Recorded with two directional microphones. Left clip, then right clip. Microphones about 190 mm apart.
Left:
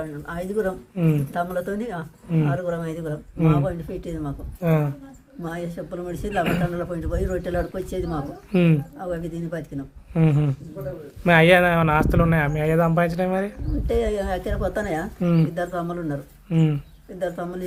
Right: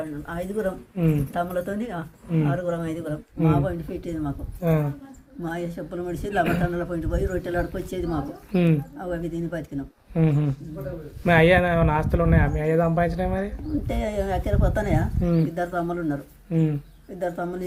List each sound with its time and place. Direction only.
0.0 s speech: 20° left (ahead or behind)
0.9 s speech: 30° left (ahead or behind)
4.6 s speech: 30° left (ahead or behind)
5.4 s speech: 15° left (ahead or behind)
6.4 s speech: 35° left (ahead or behind)
6.7 s speech: 15° left (ahead or behind)
8.5 s speech: 35° left (ahead or behind)
9.0 s speech: 20° left (ahead or behind)
10.2 s speech: 35° left (ahead or behind)
13.8 s speech: 20° left (ahead or behind)
15.2 s speech: 35° left (ahead or behind)
15.5 s speech: 20° left (ahead or behind)
16.5 s speech: 35° left (ahead or behind)
17.2 s speech: 20° left (ahead or behind)